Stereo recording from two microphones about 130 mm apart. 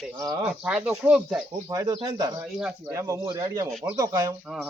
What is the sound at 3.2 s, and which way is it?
Speech, 35° right (ahead or behind).